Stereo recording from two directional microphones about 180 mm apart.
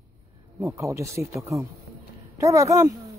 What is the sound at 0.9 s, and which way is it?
Speech, 15° right (ahead or behind).